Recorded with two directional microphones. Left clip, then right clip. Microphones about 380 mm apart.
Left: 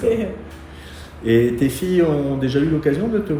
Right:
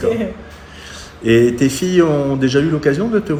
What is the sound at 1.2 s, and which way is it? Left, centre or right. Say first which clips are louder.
A man's voice: right 4 dB; centre.